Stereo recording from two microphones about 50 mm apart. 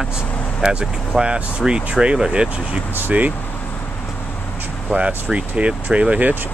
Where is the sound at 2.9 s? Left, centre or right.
Right.